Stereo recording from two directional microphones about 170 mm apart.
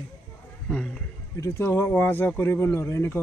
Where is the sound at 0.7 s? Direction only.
5° left (ahead or behind).